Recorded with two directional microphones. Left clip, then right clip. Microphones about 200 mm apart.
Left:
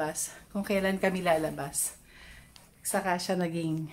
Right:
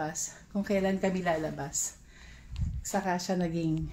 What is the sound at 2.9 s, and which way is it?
Speech, 15° right (ahead or behind).